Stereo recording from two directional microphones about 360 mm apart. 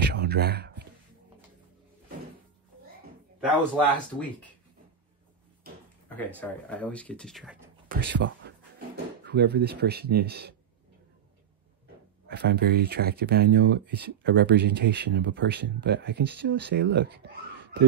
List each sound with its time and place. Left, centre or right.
0.0 s a sound: right
3.3 s speech: centre
6.0 s speech: centre
8.0 s speech: right
12.3 s speech: right